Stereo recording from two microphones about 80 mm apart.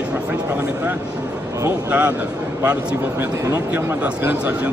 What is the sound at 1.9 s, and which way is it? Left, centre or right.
Speech, centre.